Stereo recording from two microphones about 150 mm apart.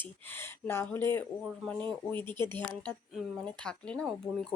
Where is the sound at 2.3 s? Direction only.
15° left (ahead or behind).